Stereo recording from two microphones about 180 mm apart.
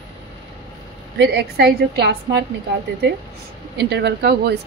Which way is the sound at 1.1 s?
65° right (ahead or behind).